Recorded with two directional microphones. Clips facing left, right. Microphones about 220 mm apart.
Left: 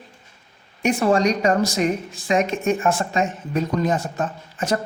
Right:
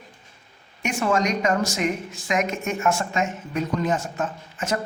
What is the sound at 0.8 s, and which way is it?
A woman's voice, 35° left (ahead or behind).